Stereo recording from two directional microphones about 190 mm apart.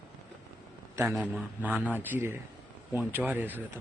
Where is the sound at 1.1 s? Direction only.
Centre (ahead or behind).